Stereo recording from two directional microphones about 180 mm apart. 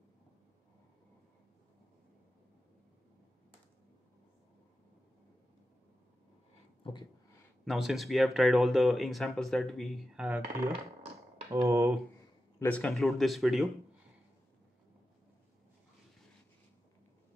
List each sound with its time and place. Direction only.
6.8 s a sound: 25° left (ahead or behind)
7.6 s speech: centre (ahead or behind)
11.5 s speech: 15° right (ahead or behind)
12.5 s speech: 10° left (ahead or behind)